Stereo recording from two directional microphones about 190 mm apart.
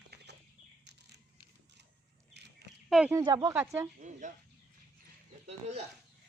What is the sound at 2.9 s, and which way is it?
Speech, 5° right (ahead or behind).